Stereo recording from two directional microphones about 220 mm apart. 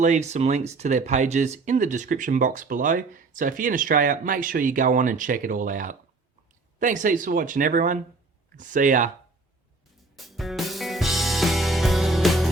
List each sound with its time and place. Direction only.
0.0 s speech: 30° right (ahead or behind)
10.2 s music: centre (ahead or behind)